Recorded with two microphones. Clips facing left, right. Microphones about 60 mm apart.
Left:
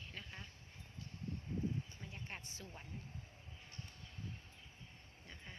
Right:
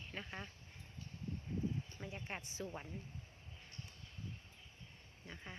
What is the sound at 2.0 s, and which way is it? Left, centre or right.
Speech, right.